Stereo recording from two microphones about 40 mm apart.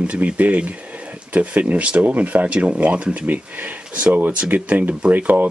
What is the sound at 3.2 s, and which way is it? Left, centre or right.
Speech, right.